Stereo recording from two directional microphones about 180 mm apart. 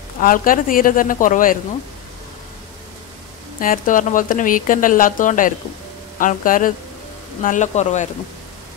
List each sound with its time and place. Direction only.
0.2 s speech: 50° left (ahead or behind)
3.5 s speech: 50° left (ahead or behind)